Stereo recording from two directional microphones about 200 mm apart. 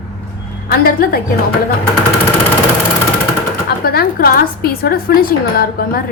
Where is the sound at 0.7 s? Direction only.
50° left (ahead or behind).